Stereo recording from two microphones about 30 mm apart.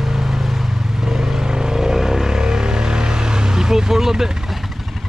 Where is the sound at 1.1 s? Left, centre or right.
Centre.